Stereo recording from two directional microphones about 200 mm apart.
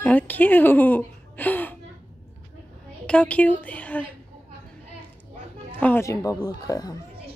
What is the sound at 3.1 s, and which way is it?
A woman's voice, 5° left (ahead or behind).